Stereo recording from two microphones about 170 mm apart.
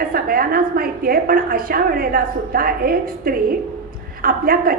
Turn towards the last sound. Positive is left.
turn(degrees=-60)  # may be behind; listen again after turning